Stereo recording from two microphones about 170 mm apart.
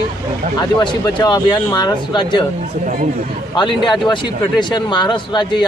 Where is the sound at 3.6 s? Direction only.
30° left (ahead or behind).